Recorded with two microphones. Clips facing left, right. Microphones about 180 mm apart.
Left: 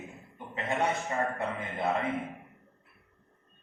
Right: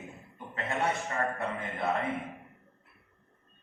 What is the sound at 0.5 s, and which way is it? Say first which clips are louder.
A man's voice: left 1 dB; 20° left (ahead or behind).